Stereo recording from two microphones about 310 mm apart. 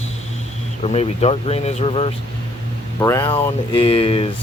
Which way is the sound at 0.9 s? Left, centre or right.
Centre.